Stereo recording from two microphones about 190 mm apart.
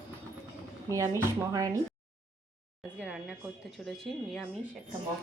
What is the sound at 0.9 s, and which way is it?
Speech, 15° right (ahead or behind).